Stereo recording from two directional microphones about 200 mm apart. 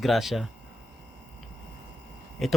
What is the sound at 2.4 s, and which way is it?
Speech, centre (ahead or behind).